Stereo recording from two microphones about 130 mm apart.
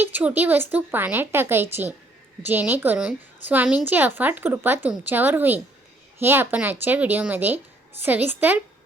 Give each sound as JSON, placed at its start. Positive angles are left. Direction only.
{"t": 0.0, "sound": "speech", "side_deg": -15}